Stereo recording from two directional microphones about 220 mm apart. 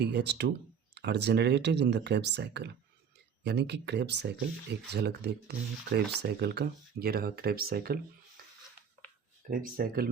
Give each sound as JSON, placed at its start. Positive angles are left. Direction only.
{"t": 0.0, "sound": "speech", "side_deg": -50}
{"t": 9.5, "sound": "speech", "side_deg": -40}